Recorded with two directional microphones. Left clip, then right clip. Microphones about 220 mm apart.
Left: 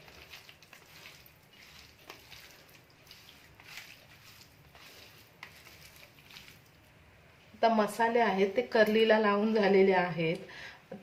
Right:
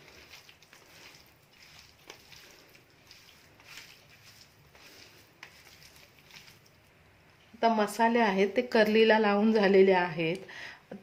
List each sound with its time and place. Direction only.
7.6 s speech: 30° right (ahead or behind)